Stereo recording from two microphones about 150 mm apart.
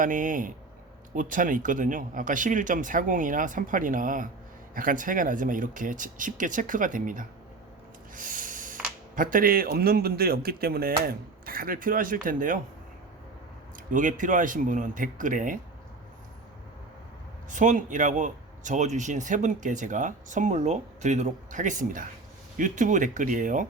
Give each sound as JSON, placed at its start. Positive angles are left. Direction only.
{"t": 0.0, "sound": "speech", "side_deg": -60}
{"t": 13.9, "sound": "speech", "side_deg": -60}
{"t": 17.5, "sound": "speech", "side_deg": -55}